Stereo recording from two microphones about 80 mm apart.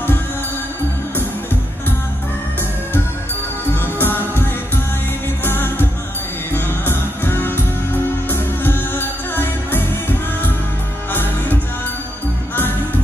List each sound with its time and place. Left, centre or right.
3.8 s music: left